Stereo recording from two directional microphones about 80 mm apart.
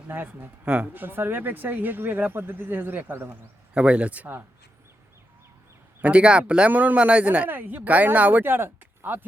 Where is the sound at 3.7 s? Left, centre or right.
Centre.